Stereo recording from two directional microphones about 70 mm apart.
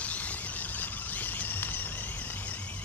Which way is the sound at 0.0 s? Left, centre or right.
Left.